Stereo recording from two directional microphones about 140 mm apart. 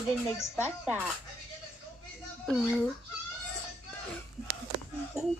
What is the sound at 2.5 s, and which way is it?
Speech, 5° right (ahead or behind).